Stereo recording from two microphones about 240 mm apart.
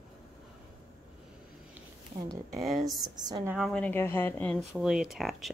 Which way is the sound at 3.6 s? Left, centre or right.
Centre.